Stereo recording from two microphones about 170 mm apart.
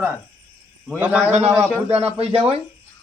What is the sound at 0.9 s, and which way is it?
Speech, 10° right (ahead or behind).